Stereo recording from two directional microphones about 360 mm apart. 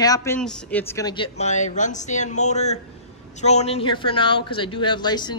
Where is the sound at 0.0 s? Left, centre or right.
Centre.